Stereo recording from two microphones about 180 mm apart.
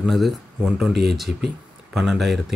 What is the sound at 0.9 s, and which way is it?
Speech, 65° right (ahead or behind).